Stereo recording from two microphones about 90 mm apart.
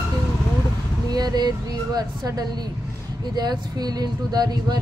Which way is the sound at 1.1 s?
50° right (ahead or behind).